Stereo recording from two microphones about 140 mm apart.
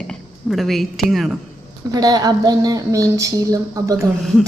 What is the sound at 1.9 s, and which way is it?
Speech, 30° right (ahead or behind).